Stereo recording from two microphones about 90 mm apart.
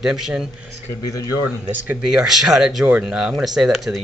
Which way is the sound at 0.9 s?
35° left (ahead or behind).